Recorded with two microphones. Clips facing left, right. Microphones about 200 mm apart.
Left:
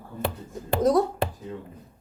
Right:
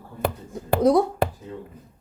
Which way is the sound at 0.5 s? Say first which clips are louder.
Right 3 dB; 10° right (ahead or behind).